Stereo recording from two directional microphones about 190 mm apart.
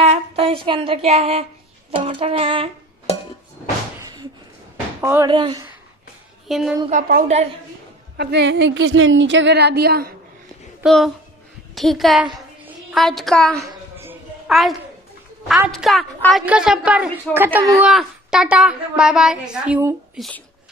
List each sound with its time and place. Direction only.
0.0 s a sound: 35° right (ahead or behind)
1.9 s music: 30° right (ahead or behind)
4.0 s slam: 20° right (ahead or behind)
5.0 s speech: 15° right (ahead or behind)
5.3 s music: 25° right (ahead or behind)
6.4 s a woman's voice: centre (ahead or behind)
6.9 s a woman's voice: 45° right (ahead or behind)
8.2 s speech: 65° right (ahead or behind)
10.8 s a woman's voice: centre (ahead or behind)
12.4 s a sound: centre (ahead or behind)
13.6 s a sound: 15° right (ahead or behind)
14.5 s a child's voice: centre (ahead or behind)